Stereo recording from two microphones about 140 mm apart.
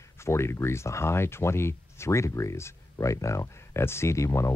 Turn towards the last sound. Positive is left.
turn(degrees=20)  # may be behind; listen again after turning